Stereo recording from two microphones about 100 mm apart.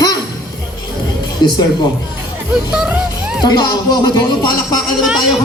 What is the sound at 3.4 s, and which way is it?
Speech, 45° left (ahead or behind).